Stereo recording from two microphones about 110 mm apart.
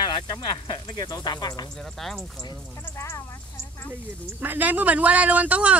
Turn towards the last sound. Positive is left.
turn(degrees=-10)  # may be behind; listen again after turning